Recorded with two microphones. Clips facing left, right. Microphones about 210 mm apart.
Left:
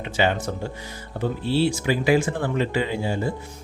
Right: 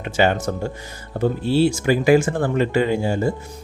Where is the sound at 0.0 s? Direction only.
50° right (ahead or behind).